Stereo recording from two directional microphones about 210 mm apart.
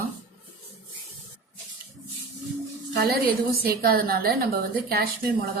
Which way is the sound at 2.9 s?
50° right (ahead or behind).